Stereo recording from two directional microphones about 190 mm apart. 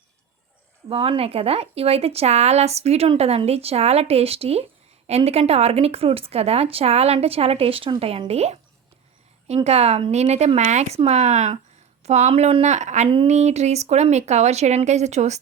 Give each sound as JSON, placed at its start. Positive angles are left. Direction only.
{"t": 0.9, "sound": "speech", "side_deg": -30}
{"t": 9.6, "sound": "speech", "side_deg": -35}